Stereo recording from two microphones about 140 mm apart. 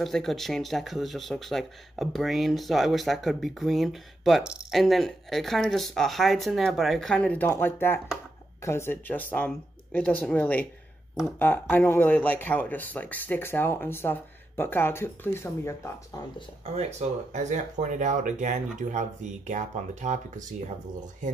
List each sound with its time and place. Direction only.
0.0 s speech: centre (ahead or behind); by 15.9 s 15° left (ahead or behind)
16.7 s speech: 55° right (ahead or behind)